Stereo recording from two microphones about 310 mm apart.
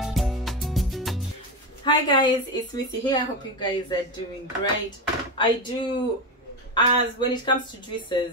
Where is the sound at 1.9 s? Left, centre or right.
Centre.